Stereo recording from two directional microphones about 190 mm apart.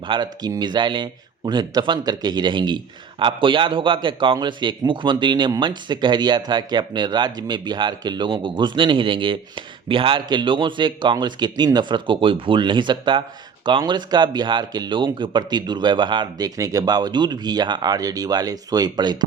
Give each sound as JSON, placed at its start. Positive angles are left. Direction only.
{"t": 0.1, "sound": "speech", "side_deg": -20}